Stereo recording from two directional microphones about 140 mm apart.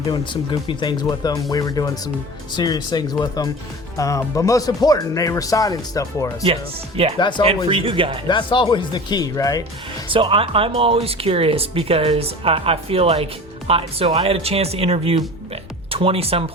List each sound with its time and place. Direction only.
0.7 s speech: 35° left (ahead or behind)
6.4 s speech: 40° right (ahead or behind)
7.2 s speech: 35° left (ahead or behind)
7.4 s speech: 45° right (ahead or behind)
8.3 s speech: 35° left (ahead or behind)
10.1 s speech: 40° right (ahead or behind)